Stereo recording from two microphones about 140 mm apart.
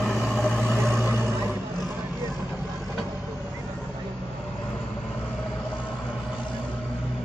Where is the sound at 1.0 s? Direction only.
15° right (ahead or behind).